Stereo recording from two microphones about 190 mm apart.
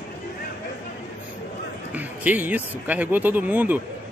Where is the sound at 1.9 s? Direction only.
10° right (ahead or behind).